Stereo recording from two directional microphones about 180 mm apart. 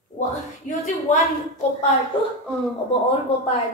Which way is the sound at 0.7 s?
45° left (ahead or behind).